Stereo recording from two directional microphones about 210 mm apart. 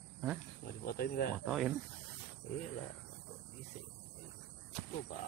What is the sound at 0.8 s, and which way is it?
Speech, 45° left (ahead or behind).